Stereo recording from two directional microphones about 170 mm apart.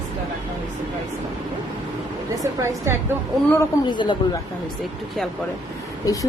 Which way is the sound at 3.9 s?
30° left (ahead or behind).